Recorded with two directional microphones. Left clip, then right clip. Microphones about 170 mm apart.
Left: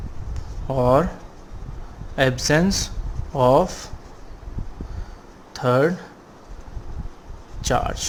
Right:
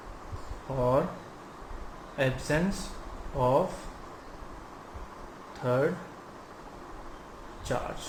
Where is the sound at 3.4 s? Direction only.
90° left.